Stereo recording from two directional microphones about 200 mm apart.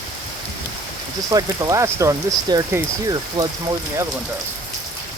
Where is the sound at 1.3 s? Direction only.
15° right (ahead or behind).